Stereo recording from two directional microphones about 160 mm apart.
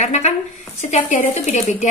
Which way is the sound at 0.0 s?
45° left (ahead or behind).